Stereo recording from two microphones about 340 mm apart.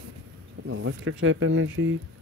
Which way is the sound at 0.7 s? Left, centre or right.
Right.